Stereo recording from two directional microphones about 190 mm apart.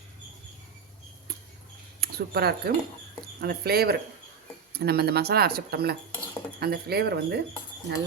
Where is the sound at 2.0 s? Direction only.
55° right (ahead or behind).